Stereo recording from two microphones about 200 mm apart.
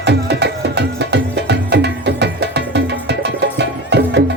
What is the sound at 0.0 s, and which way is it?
Music, 55° right (ahead or behind).